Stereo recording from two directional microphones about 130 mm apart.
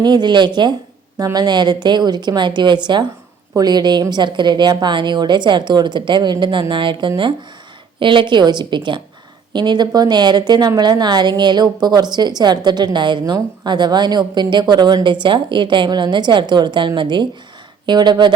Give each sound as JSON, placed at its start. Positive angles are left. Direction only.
{"t": 0.0, "sound": "a woman's voice", "side_deg": -35}